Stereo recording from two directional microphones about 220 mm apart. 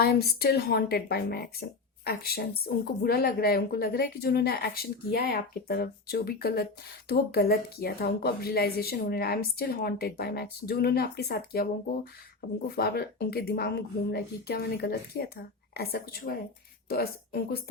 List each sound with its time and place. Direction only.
0.0 s a woman's voice: 45° left (ahead or behind)